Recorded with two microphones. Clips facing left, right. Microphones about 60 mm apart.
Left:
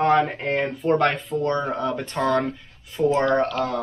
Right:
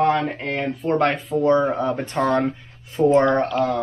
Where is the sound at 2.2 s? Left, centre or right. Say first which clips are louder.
Right 2 dB; right.